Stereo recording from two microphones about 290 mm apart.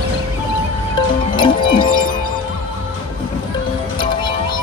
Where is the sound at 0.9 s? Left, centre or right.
Centre.